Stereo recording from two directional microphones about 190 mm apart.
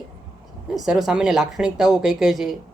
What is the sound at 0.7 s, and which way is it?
Speech, centre (ahead or behind).